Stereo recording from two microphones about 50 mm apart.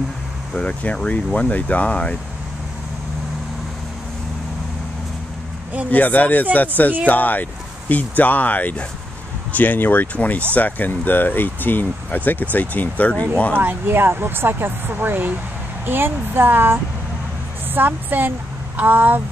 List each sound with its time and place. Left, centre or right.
0.6 s speech: left
5.9 s speech: left
13.6 s a woman's voice: right